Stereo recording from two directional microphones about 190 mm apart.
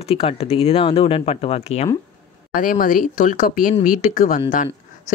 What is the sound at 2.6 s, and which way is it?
Speech, 45° left (ahead or behind).